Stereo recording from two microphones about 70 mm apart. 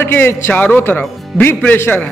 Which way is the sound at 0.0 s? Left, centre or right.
Left.